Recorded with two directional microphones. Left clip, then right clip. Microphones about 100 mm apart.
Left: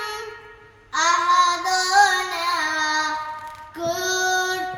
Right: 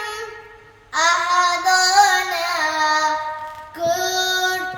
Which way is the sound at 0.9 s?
40° right (ahead or behind).